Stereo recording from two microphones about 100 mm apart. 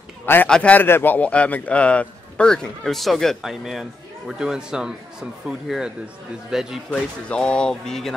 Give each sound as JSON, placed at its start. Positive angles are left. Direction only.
{"t": 0.2, "sound": "a man's voice", "side_deg": 20}
{"t": 6.9, "sound": "a man's voice", "side_deg": 10}